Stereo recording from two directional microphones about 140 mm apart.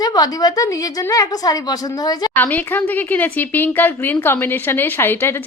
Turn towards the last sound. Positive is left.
turn(degrees=15)  # may be behind; listen again after turning